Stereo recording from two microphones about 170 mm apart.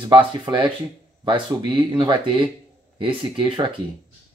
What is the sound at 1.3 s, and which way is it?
Speech, 30° right (ahead or behind).